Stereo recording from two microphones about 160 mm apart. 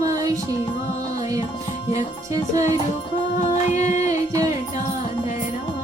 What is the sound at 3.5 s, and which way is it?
Music, 50° left (ahead or behind).